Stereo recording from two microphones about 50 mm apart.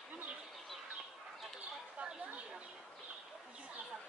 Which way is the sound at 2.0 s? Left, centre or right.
Centre.